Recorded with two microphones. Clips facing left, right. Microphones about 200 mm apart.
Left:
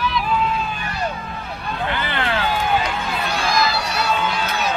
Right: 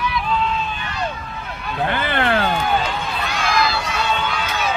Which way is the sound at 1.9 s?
50° right (ahead or behind).